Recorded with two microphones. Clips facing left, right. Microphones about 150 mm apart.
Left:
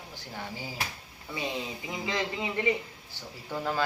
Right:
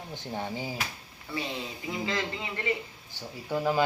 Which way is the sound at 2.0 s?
15° left (ahead or behind).